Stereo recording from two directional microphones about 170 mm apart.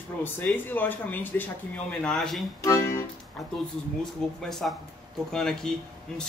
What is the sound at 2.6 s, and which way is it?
Speech, 15° left (ahead or behind).